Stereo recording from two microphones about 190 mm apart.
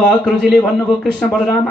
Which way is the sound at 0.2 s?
Centre (ahead or behind).